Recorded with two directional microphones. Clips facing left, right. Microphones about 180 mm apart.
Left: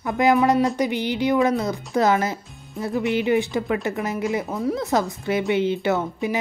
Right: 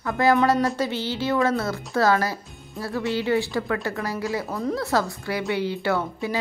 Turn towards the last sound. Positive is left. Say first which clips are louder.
# left 2 dB
turn(degrees=20)  # may be behind; listen again after turning